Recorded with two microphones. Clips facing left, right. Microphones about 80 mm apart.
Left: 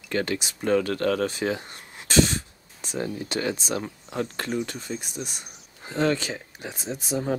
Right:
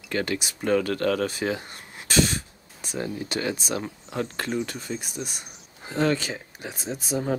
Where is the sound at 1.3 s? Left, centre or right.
Centre.